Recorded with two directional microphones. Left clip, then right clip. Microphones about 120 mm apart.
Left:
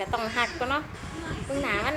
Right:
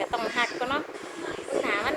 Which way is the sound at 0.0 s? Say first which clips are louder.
Even; 20° left (ahead or behind).